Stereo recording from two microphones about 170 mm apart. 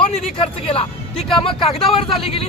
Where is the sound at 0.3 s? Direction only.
35° left (ahead or behind).